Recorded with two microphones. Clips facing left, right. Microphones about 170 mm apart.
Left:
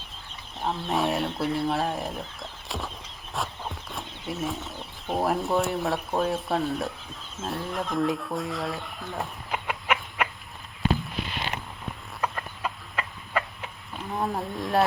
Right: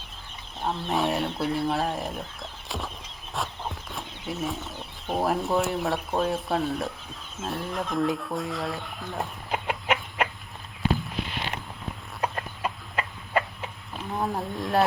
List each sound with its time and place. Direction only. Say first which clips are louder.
0.6 s speech: even; centre (ahead or behind)
9.5 s chicken: right 2 dB; 25° right (ahead or behind)
12.2 s chicken: right 1 dB; 20° right (ahead or behind)
14.1 s speech: even; centre (ahead or behind)